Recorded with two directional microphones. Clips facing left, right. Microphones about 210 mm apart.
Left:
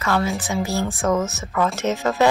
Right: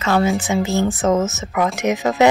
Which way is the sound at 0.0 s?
25° right (ahead or behind).